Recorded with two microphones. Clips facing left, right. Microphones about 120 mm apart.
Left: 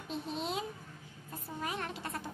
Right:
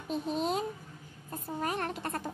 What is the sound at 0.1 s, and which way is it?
A child's voice, 45° right (ahead or behind).